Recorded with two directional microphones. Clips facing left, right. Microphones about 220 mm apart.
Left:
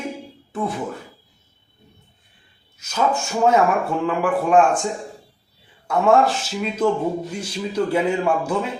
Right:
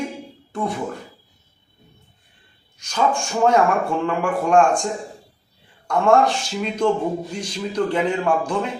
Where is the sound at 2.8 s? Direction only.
5° left (ahead or behind).